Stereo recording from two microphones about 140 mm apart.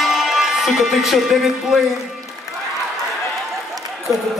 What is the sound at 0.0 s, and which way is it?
Speech, centre (ahead or behind).